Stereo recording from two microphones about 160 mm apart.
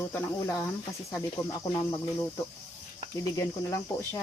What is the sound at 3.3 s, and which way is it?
Speech, 20° left (ahead or behind).